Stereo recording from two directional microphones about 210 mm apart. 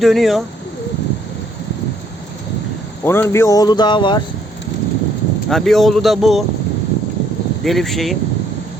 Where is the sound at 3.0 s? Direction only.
10° left (ahead or behind).